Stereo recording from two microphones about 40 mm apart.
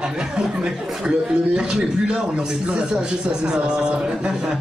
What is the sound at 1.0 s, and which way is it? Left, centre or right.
Speech, right.